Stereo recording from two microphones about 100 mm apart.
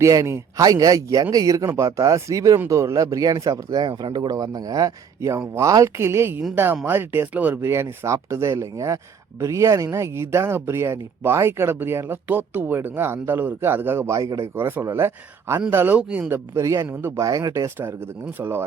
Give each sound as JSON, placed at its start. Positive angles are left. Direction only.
{"t": 0.0, "sound": "a man's voice", "side_deg": -30}
{"t": 16.6, "sound": "speech", "side_deg": -30}
{"t": 17.2, "sound": "speech", "side_deg": -35}
{"t": 17.7, "sound": "speech", "side_deg": -20}